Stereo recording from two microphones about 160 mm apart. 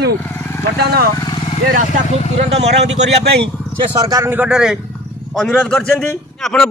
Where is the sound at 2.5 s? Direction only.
40° right (ahead or behind).